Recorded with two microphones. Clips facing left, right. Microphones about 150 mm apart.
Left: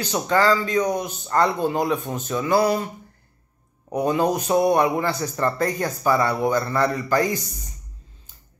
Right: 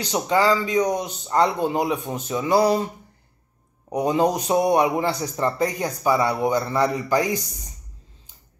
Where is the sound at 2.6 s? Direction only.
25° right (ahead or behind).